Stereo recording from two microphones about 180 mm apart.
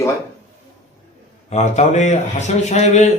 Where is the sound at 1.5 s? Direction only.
40° left (ahead or behind).